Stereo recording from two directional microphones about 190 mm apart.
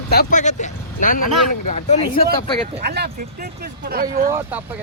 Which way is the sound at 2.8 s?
55° right (ahead or behind).